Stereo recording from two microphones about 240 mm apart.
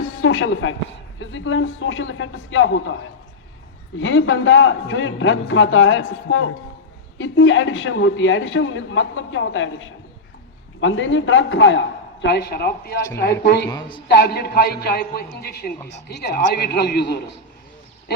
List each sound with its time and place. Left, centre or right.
0.0 s music: left
1.2 s a man's voice: left
13.7 s speech: centre
14.1 s a woman's voice: left